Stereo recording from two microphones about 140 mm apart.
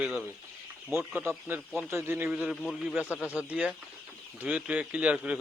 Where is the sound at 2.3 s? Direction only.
5° right (ahead or behind).